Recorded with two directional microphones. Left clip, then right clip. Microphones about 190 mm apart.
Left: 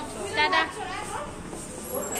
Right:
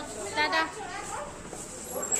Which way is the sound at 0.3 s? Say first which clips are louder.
Left 4 dB; 15° right (ahead or behind).